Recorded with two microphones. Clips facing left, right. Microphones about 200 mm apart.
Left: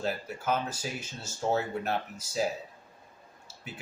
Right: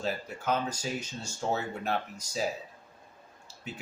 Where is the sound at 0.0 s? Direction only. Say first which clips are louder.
Left 1 dB; 5° left (ahead or behind).